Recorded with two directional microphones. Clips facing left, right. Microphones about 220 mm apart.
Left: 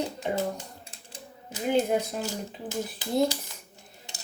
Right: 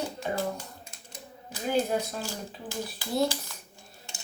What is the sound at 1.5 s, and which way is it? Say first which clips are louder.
Speech: left 3 dB; 20° left (ahead or behind).